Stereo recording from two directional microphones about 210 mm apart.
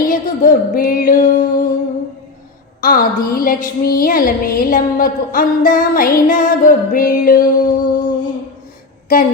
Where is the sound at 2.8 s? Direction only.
40° left (ahead or behind).